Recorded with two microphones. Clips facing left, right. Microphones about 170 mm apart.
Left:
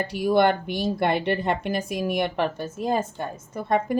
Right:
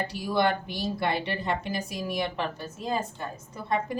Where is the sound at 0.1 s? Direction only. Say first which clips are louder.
Left 8 dB; 55° left (ahead or behind).